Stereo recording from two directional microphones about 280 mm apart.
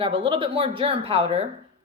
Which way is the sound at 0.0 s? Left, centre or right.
Centre.